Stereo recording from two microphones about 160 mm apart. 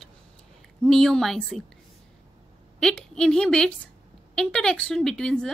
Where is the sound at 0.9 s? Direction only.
5° left (ahead or behind).